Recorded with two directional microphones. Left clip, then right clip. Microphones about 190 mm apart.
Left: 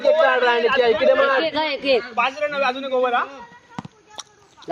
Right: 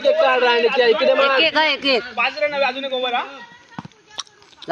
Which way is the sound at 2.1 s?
55° left (ahead or behind).